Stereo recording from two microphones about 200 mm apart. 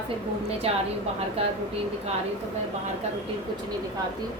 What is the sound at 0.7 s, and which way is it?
Speech, 30° right (ahead or behind).